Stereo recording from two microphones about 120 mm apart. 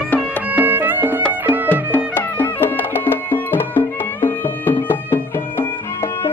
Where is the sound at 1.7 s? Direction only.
15° left (ahead or behind).